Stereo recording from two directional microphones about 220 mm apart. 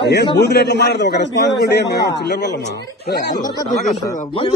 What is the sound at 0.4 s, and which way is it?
Speech, 50° left (ahead or behind).